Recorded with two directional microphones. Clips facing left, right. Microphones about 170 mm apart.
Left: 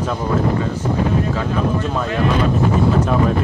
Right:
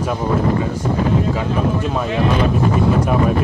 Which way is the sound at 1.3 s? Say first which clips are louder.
Right 1 dB; 10° right (ahead or behind).